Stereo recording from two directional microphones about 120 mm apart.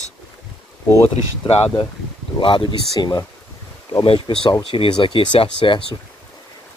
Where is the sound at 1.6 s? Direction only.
45° left (ahead or behind).